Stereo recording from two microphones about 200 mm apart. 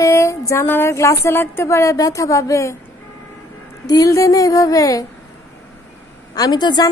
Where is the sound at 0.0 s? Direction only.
15° left (ahead or behind).